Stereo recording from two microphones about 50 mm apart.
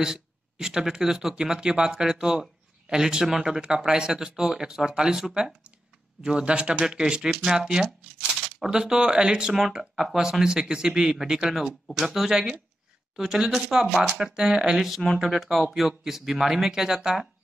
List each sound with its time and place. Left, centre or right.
0.0 s speech: centre
6.9 s speech: centre
15.0 s speech: centre